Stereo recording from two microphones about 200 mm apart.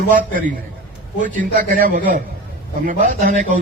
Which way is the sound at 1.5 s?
40° right (ahead or behind).